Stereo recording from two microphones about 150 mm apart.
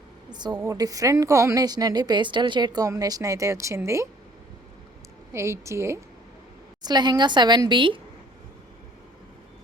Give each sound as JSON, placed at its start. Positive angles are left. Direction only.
{"t": 0.3, "sound": "a woman's voice", "side_deg": -30}
{"t": 5.3, "sound": "a woman's voice", "side_deg": -20}